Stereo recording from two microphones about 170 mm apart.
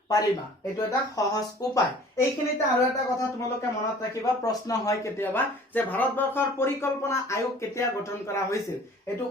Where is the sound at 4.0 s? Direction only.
20° left (ahead or behind).